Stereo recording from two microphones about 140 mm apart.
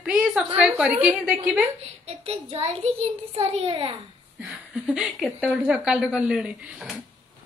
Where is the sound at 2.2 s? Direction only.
50° right (ahead or behind).